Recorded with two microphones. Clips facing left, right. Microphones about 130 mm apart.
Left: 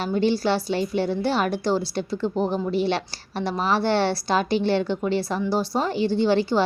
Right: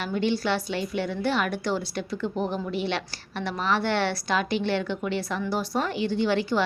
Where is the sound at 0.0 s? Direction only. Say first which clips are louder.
Left 4 dB; 35° left (ahead or behind).